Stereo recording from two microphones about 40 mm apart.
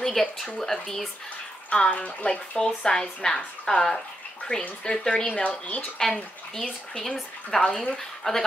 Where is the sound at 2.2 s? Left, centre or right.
Left.